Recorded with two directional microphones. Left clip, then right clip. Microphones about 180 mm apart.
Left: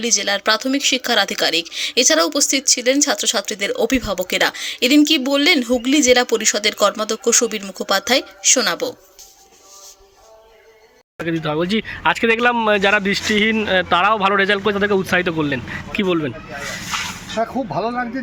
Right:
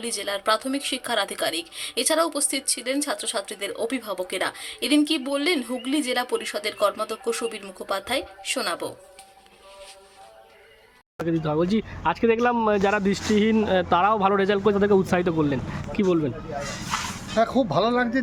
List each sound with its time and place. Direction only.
0.0 s speech: 20° left (ahead or behind)
11.2 s speech: centre (ahead or behind)
17.3 s speech: 20° right (ahead or behind)